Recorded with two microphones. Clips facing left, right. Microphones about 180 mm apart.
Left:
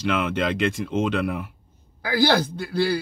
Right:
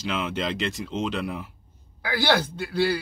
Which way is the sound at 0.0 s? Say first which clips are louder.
Left 5 dB; 55° left (ahead or behind).